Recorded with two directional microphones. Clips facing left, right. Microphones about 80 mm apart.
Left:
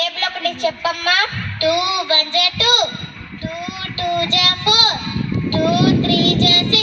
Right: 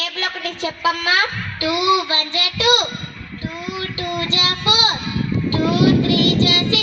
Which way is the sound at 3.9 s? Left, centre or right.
Right.